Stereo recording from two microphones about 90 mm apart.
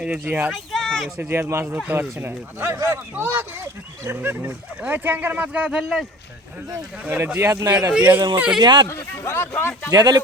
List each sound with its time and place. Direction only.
0.3 s speech: 20° right (ahead or behind)
0.5 s speech: centre (ahead or behind)
1.2 s speech: 25° right (ahead or behind)
1.6 s speech: 20° right (ahead or behind)
7.0 s speech: 20° right (ahead or behind)
7.4 s speech: 35° right (ahead or behind)
7.9 s speech: 15° right (ahead or behind)
8.5 s speech: 50° right (ahead or behind)
8.9 s speech: 30° left (ahead or behind)
9.9 s speech: 50° right (ahead or behind)